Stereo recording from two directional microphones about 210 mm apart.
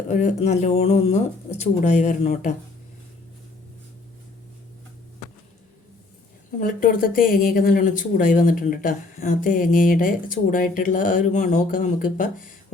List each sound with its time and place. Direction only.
0.1 s speech: 35° left (ahead or behind)
6.6 s speech: 40° left (ahead or behind)